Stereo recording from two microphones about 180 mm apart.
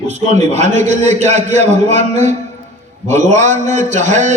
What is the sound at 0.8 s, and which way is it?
A man's voice, 40° right (ahead or behind).